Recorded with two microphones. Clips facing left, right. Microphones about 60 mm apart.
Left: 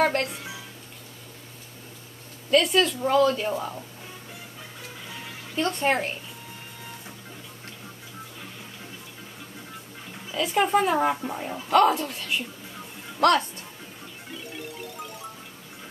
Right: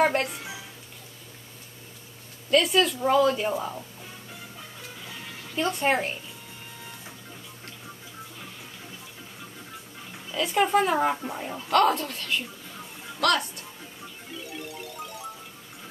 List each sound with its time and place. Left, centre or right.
0.0 s speech: centre
2.5 s speech: centre
5.2 s music: centre
5.7 s speech: centre
10.3 s speech: centre
13.2 s speech: left
14.5 s music: centre